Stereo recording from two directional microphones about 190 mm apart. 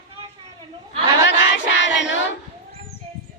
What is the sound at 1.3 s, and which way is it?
Child singing, 70° left (ahead or behind).